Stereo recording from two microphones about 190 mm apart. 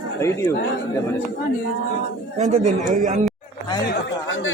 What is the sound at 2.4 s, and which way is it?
Speech, 40° right (ahead or behind).